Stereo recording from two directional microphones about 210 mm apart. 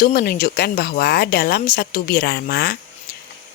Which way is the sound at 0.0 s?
45° left (ahead or behind).